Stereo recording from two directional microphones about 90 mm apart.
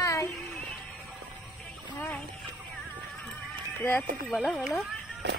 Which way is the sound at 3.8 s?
20° left (ahead or behind).